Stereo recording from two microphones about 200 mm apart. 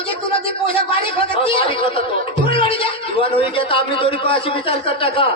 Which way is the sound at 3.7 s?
25° left (ahead or behind).